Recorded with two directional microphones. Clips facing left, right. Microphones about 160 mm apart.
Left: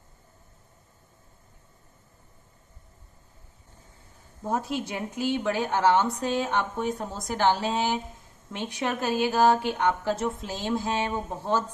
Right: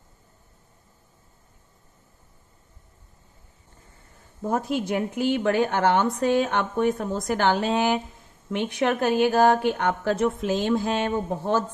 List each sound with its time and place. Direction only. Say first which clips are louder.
4.4 s a woman's voice: right 3 dB; 50° right (ahead or behind)